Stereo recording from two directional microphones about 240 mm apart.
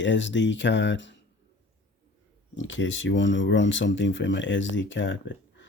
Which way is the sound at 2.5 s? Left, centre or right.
Left.